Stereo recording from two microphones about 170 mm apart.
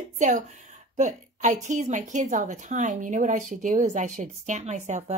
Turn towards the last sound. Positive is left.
turn(degrees=-45)  # may be behind; listen again after turning